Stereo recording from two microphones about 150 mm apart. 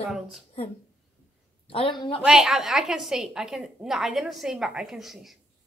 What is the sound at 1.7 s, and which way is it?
Speech, 35° left (ahead or behind).